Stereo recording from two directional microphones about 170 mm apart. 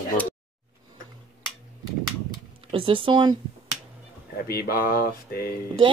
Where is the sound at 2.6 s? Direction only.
30° right (ahead or behind).